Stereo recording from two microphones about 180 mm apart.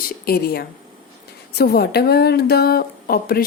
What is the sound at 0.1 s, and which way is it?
A woman's voice, 60° left (ahead or behind).